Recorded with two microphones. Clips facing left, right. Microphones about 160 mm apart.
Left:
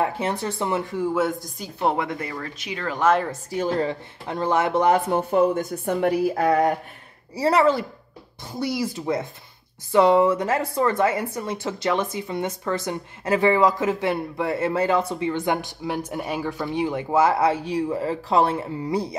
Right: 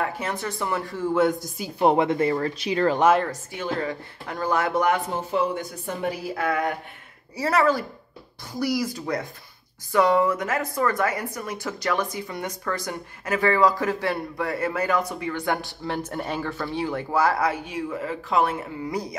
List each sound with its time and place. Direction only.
0.0 s speech: 30° left (ahead or behind)
1.1 s speech: 5° left (ahead or behind)
1.6 s a woman's voice: 15° right (ahead or behind); by 3.0 s 35° right (ahead or behind)
3.5 s speech: 30° left (ahead or behind)
5.1 s speech: 50° left (ahead or behind)
5.9 s a woman's voice: 65° left (ahead or behind)
6.3 s a sound: 35° left (ahead or behind)
7.3 s speech: 30° left (ahead or behind)